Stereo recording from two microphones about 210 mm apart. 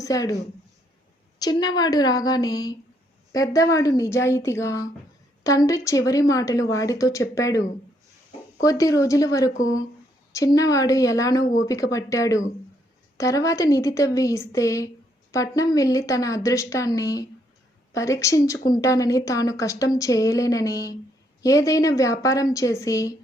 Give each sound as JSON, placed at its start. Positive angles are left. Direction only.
{"t": 0.0, "sound": "a woman's voice", "side_deg": 15}
{"t": 1.4, "sound": "a woman's voice", "side_deg": 20}